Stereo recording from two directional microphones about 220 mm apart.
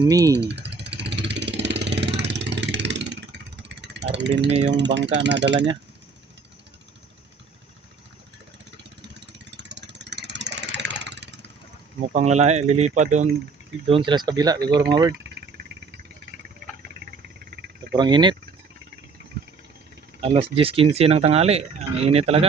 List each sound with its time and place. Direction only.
0.0 s speech: 15° right (ahead or behind)
0.3 s vehicle: 50° right (ahead or behind)
4.6 s speech: 50° right (ahead or behind)
8.8 s a sound: 50° right (ahead or behind)
11.9 s speech: 30° right (ahead or behind)
17.1 s insect: 45° right (ahead or behind)
17.9 s speech: 20° right (ahead or behind)
20.2 s speech: 25° right (ahead or behind)